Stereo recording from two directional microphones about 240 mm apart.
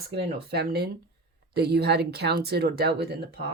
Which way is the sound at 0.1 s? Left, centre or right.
Right.